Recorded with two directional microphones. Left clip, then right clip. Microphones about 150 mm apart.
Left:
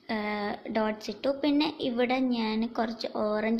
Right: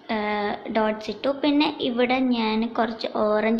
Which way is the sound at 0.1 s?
40° left (ahead or behind).